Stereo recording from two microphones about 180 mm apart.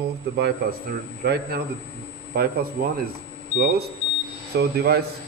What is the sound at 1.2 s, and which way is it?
Speech, 60° right (ahead or behind).